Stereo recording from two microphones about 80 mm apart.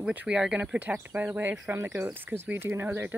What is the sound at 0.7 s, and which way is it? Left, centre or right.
Speech, right.